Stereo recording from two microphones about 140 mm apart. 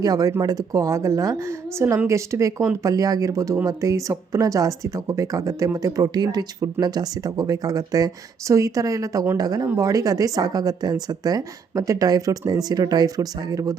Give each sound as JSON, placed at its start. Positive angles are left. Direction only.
{"t": 0.0, "sound": "speech", "side_deg": -25}